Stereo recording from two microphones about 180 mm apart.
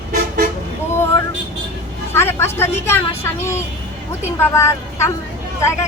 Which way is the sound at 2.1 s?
15° left (ahead or behind).